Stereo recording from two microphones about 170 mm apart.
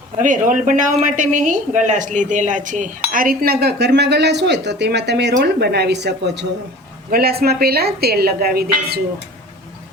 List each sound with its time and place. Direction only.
0.2 s a woman's voice: 50° right (ahead or behind); by 6.5 s 90° right
7.1 s speech: 65° right (ahead or behind)